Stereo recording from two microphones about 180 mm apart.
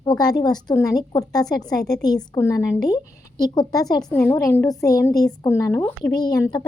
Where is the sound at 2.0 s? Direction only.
20° left (ahead or behind).